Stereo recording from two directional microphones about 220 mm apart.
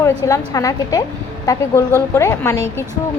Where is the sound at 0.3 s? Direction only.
15° left (ahead or behind).